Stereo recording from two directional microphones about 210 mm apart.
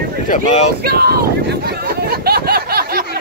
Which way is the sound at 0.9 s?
45° right (ahead or behind).